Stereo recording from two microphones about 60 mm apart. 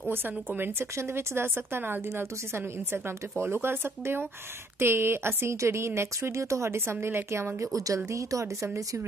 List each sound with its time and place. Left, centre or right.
0.1 s a woman's voice: right